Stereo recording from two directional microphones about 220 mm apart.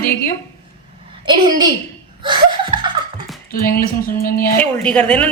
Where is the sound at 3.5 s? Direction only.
40° left (ahead or behind).